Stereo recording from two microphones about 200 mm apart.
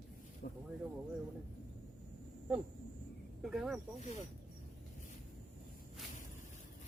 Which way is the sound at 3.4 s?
Centre (ahead or behind).